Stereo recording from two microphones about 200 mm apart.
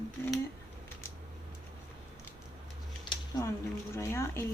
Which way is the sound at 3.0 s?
20° left (ahead or behind).